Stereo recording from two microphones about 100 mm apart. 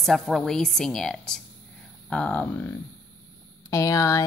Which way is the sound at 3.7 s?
35° left (ahead or behind).